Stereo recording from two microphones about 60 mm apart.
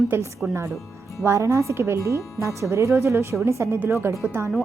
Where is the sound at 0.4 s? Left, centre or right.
Right.